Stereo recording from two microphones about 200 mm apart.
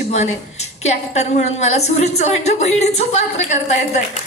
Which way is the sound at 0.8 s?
35° left (ahead or behind).